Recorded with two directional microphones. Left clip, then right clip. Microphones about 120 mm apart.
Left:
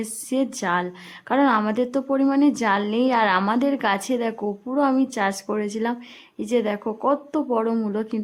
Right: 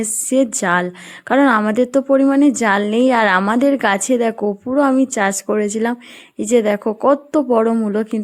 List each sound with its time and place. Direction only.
0.0 s a woman's voice: 45° right (ahead or behind)